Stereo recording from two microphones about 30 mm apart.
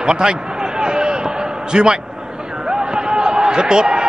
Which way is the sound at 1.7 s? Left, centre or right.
Right.